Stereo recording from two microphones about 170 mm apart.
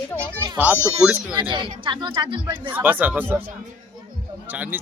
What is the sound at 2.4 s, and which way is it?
A man's voice, 10° right (ahead or behind).